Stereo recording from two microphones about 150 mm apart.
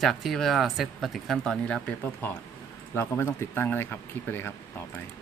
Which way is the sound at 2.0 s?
15° left (ahead or behind).